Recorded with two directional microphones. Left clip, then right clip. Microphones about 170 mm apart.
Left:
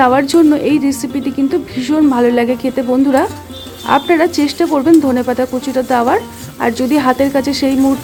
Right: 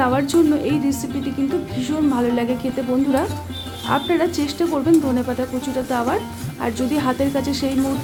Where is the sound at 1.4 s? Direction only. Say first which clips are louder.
Left 7 dB; 40° left (ahead or behind).